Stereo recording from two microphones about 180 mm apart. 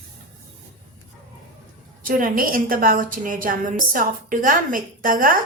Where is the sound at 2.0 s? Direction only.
50° right (ahead or behind).